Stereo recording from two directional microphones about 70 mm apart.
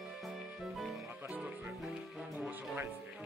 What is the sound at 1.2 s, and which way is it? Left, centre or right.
Music, centre.